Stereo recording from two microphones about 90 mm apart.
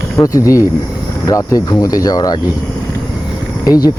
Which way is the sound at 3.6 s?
45° left (ahead or behind).